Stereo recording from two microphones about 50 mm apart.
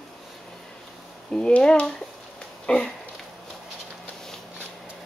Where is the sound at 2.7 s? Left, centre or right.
Centre.